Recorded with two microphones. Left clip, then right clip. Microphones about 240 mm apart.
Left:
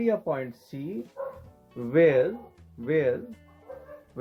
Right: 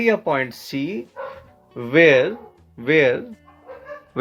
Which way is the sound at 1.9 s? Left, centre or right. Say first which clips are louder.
Right 7 dB; right.